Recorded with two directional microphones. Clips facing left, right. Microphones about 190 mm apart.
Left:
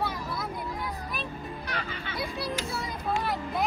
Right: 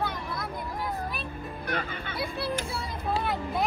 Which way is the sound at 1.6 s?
55° right (ahead or behind).